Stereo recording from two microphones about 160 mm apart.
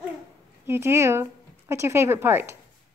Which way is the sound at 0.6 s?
15° right (ahead or behind).